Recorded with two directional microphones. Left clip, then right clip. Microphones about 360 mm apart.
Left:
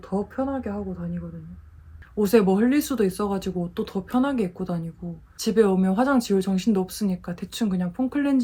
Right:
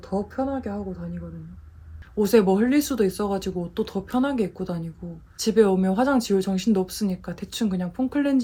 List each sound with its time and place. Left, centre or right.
0.1 s speech: centre